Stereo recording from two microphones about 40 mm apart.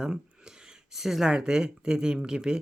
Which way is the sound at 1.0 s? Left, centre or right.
Centre.